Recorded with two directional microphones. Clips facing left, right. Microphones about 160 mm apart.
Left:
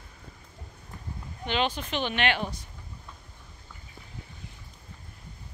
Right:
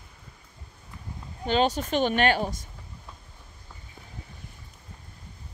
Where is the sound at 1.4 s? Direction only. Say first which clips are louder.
Right 5 dB; 40° right (ahead or behind).